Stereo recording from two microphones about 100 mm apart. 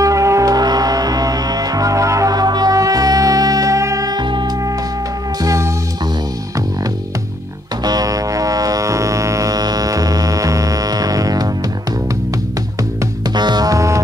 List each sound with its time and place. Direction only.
0.0 s music: 30° right (ahead or behind); by 4.5 s 50° right (ahead or behind)
5.4 s music: 35° right (ahead or behind)
7.8 s music: 40° right (ahead or behind)
13.3 s music: 45° right (ahead or behind)